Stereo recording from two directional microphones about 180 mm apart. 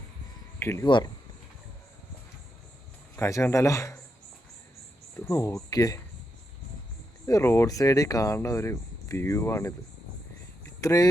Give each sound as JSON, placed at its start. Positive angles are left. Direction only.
{"t": 0.6, "sound": "speech", "side_deg": 15}
{"t": 0.9, "sound": "speech", "side_deg": 25}
{"t": 3.2, "sound": "speech", "side_deg": 15}
{"t": 5.2, "sound": "speech", "side_deg": 15}
{"t": 7.3, "sound": "speech", "side_deg": 15}
{"t": 10.8, "sound": "speech", "side_deg": 20}